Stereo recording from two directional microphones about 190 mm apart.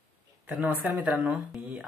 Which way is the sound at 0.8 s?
5° right (ahead or behind).